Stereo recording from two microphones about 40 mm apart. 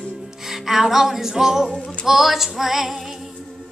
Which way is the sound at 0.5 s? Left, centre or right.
Centre.